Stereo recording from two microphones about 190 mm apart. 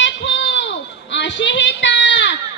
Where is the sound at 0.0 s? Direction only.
70° left (ahead or behind).